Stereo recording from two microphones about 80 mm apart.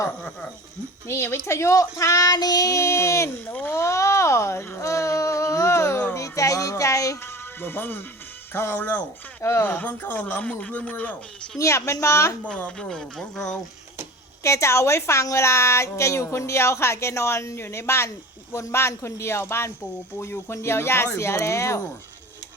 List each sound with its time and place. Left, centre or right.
0.2 s speech: centre
1.0 s speech: left
3.4 s a man's voice: left
3.8 s speech: left
4.8 s a sound: left
7.2 s music: left
8.5 s a man's voice: left
9.6 s a man's voice: left
11.5 s speech: left
12.7 s speech: centre
14.4 s speech: left